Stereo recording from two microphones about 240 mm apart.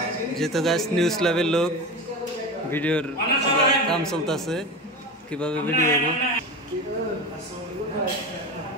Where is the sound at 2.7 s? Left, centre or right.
Centre.